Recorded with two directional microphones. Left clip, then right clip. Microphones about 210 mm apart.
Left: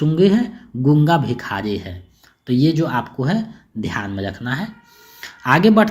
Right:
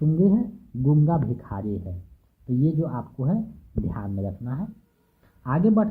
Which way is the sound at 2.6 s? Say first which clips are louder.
Left 10 dB; 30° left (ahead or behind).